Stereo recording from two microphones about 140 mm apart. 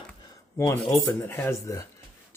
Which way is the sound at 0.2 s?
25° left (ahead or behind).